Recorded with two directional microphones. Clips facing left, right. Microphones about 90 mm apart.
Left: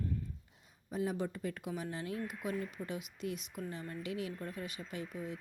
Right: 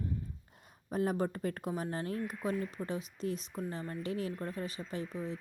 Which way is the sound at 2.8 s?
35° right (ahead or behind).